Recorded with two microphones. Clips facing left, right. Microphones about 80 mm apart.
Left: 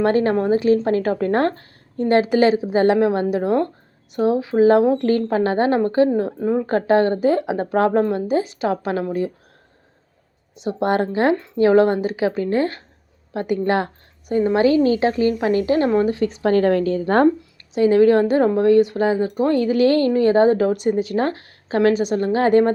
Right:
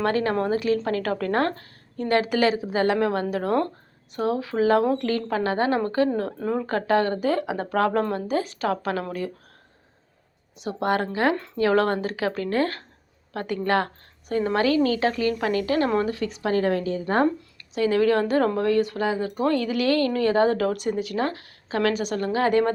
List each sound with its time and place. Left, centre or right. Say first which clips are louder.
0.0 s speech: left 6 dB; left
6.7 s speech: left 5 dB; left
10.5 s a woman's voice: left 4 dB; left
17.7 s speech: left 7 dB; left